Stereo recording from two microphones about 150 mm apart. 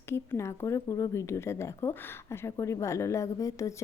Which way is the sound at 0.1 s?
20° left (ahead or behind).